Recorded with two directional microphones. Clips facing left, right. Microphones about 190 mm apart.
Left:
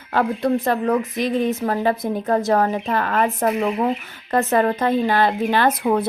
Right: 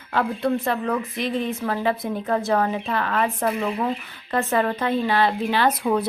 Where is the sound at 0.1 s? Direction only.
40° left (ahead or behind).